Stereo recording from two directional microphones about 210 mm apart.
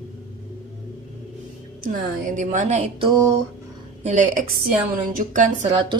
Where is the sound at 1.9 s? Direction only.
40° right (ahead or behind).